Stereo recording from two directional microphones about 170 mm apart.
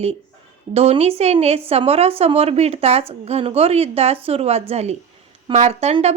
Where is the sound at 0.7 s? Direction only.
35° right (ahead or behind).